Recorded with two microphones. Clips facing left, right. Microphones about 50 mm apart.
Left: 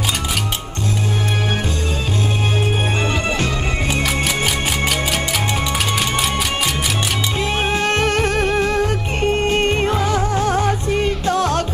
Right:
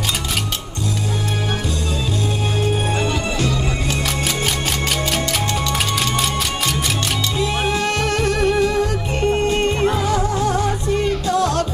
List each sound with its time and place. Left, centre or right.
2.6 s music: left
4.0 s music: centre
7.3 s music: left